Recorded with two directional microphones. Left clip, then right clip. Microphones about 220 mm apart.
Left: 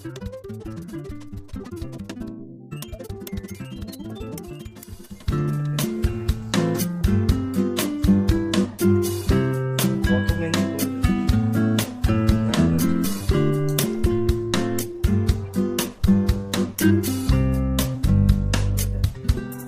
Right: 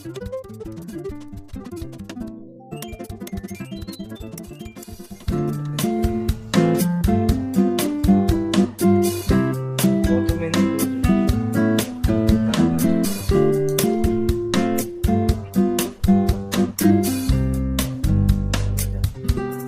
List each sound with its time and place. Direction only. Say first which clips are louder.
5.3 s music: right 2 dB; centre (ahead or behind)